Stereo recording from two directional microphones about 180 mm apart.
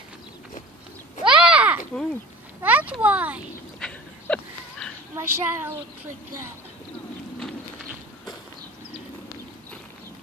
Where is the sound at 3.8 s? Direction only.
5° left (ahead or behind).